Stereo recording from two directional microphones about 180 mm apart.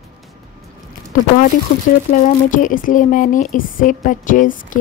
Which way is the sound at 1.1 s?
45° left (ahead or behind).